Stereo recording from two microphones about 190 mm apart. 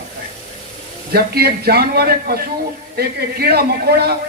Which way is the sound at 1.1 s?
55° right (ahead or behind).